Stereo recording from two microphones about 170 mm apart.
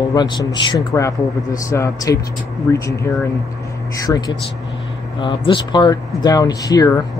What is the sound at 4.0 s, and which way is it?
Speech, 20° left (ahead or behind).